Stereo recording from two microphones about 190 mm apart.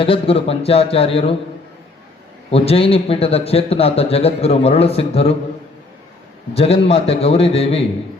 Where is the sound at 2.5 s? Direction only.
30° left (ahead or behind).